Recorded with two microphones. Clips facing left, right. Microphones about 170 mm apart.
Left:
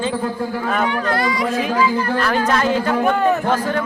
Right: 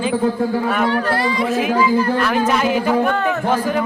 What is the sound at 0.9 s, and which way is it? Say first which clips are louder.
Speech: right 1 dB; 30° right (ahead or behind).